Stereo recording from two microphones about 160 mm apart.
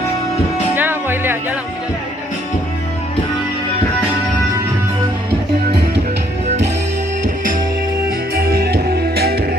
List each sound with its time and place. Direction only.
0.8 s music: 15° right (ahead or behind)
8.4 s music: 75° right (ahead or behind)